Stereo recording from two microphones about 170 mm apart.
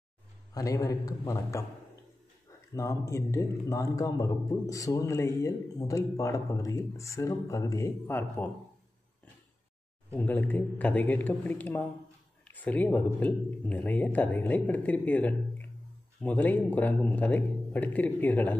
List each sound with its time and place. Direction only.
0.6 s a man's voice: 20° left (ahead or behind)
2.7 s a man's voice: 20° left (ahead or behind)
10.1 s speech: 10° left (ahead or behind)